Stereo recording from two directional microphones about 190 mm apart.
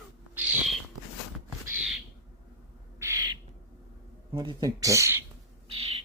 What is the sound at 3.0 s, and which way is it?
Bird, 15° right (ahead or behind).